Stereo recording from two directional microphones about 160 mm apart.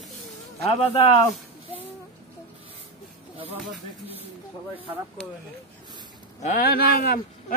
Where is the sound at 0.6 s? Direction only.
40° left (ahead or behind).